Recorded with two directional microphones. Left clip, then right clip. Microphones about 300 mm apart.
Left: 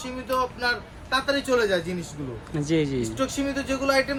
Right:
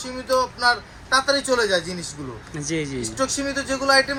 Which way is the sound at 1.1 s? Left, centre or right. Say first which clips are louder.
Right 4 dB; centre.